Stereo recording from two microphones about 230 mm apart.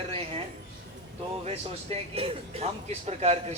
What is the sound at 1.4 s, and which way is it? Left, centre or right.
Speech, right.